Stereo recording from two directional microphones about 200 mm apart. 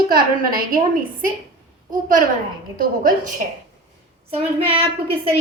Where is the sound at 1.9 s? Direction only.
40° right (ahead or behind).